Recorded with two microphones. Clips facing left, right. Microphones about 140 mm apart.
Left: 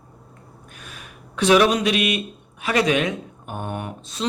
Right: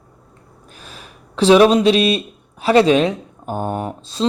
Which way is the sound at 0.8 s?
30° right (ahead or behind).